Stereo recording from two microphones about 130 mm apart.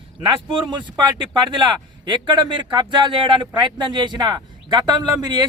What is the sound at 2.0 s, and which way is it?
Speech, 35° right (ahead or behind).